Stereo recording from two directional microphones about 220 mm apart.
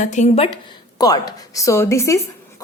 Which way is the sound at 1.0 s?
15° left (ahead or behind).